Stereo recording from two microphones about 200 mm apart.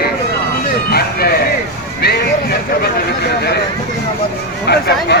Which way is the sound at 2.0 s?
50° left (ahead or behind).